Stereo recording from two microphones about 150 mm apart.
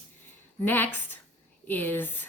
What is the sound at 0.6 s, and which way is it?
A woman's voice, 10° left (ahead or behind).